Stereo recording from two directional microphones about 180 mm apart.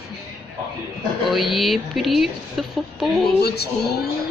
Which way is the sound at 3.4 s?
65° left (ahead or behind).